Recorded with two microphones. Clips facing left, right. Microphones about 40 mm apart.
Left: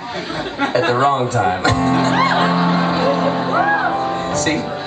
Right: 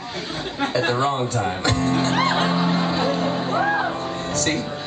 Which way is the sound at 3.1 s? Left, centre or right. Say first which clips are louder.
Left 5 dB; centre.